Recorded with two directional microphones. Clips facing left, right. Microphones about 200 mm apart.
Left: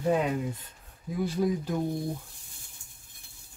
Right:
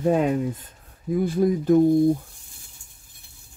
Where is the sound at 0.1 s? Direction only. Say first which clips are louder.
Right 4 dB; 45° right (ahead or behind).